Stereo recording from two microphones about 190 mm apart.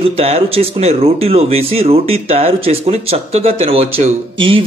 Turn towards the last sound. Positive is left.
turn(degrees=-30)  # may be behind; listen again after turning